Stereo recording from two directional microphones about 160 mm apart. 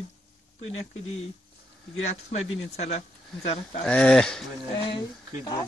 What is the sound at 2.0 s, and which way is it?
Speech, 45° left (ahead or behind).